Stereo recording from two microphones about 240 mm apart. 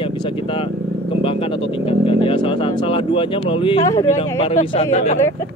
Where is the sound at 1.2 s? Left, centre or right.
Left.